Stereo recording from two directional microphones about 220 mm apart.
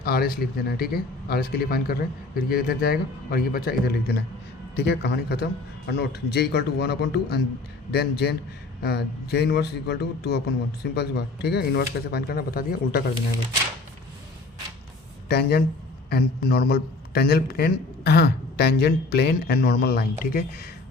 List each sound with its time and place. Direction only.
0.0 s a man's voice: 45° left (ahead or behind)
15.3 s a man's voice: 45° left (ahead or behind)